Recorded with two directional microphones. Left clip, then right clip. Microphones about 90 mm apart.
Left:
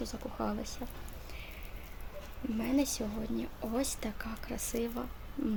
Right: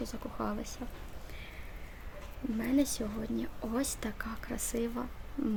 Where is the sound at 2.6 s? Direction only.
40° right (ahead or behind).